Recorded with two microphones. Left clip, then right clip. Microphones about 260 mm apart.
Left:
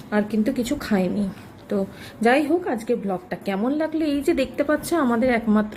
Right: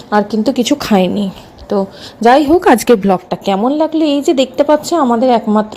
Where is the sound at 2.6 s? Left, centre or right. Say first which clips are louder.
Right 16 dB; right.